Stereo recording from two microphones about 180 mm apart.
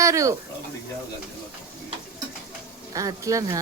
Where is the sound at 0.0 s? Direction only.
15° right (ahead or behind).